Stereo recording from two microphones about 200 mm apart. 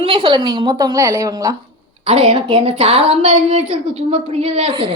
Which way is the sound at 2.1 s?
30° right (ahead or behind).